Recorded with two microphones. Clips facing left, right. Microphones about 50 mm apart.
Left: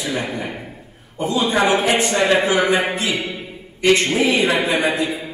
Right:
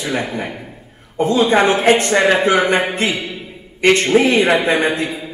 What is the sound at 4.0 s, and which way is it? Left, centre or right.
Speech, right.